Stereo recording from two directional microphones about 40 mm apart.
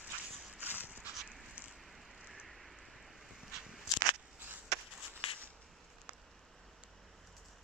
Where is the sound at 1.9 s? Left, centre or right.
Centre.